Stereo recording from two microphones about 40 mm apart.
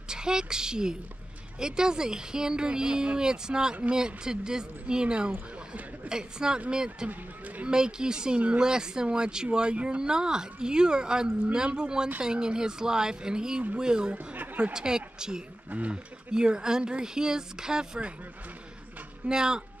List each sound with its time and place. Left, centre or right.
0.1 s a woman's voice: centre
7.1 s speech: right
7.6 s speech: centre
14.1 s chatter: right
14.6 s speech: centre
15.7 s speech: right
16.3 s speech: right
19.2 s speech: centre